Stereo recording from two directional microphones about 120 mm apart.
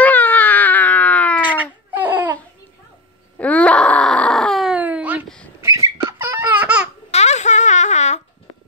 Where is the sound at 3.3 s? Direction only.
10° left (ahead or behind).